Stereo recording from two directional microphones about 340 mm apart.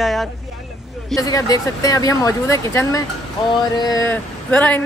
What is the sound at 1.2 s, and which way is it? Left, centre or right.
A man's voice, centre.